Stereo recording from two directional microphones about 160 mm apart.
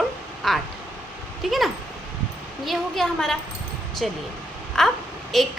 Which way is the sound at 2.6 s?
Centre (ahead or behind).